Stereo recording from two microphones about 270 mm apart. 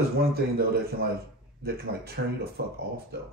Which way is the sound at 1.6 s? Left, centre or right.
Right.